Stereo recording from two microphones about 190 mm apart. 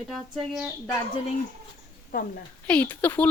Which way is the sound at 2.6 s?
10° left (ahead or behind).